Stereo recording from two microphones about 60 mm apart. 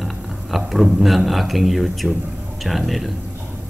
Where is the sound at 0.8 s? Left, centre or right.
Centre.